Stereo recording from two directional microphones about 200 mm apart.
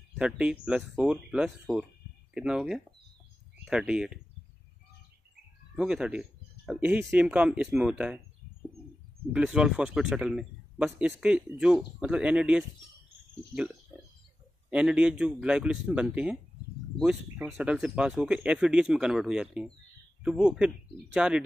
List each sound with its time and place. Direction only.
0.2 s speech: 5° right (ahead or behind)
5.8 s speech: 5° right (ahead or behind)
9.3 s speech: 5° right (ahead or behind)
14.7 s speech: 5° right (ahead or behind)